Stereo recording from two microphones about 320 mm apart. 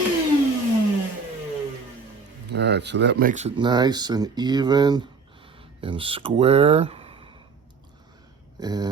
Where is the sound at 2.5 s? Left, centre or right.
Right; by 7.4 s centre.